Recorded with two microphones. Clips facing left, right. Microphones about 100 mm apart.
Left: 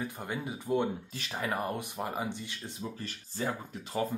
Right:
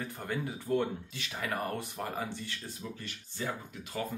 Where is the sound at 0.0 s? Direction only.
15° left (ahead or behind).